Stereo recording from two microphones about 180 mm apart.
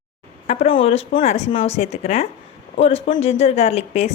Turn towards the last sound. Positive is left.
turn(degrees=35)  # may be behind; listen again after turning